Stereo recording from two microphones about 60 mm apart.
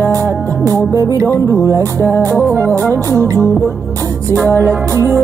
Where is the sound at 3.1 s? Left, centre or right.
Right.